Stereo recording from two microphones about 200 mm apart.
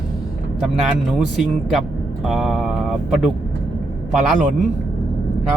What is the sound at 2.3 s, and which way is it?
A man's voice, centre (ahead or behind).